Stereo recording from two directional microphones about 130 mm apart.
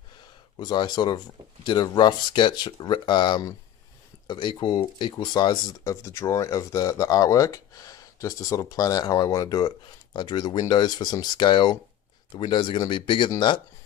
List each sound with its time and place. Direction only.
0.6 s speech: 35° left (ahead or behind)